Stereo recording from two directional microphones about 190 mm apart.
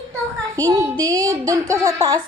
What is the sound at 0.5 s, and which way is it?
A child's voice, 15° right (ahead or behind).